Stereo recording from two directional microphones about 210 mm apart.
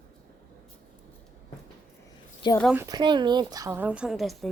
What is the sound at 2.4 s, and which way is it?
Speech, 20° left (ahead or behind).